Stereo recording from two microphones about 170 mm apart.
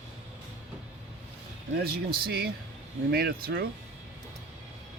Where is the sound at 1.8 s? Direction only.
65° right (ahead or behind).